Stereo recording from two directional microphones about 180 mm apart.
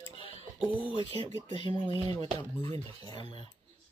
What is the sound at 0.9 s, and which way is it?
Speech, 25° left (ahead or behind).